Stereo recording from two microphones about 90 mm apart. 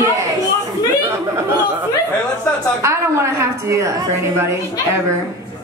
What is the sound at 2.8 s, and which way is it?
A woman's voice, 35° right (ahead or behind).